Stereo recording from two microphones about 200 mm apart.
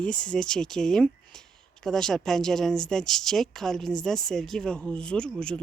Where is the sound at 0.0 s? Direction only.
5° left (ahead or behind).